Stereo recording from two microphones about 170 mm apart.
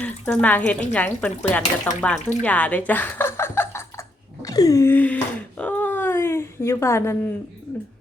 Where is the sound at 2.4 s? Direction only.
10° left (ahead or behind).